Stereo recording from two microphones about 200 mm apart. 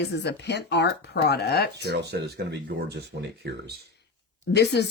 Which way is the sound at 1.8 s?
55° right (ahead or behind).